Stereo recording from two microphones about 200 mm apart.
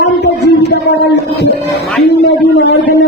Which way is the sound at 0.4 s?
60° left (ahead or behind).